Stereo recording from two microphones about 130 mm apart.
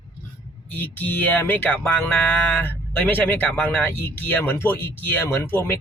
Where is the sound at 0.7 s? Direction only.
15° left (ahead or behind).